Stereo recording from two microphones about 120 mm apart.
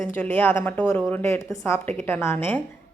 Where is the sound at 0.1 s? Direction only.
15° left (ahead or behind).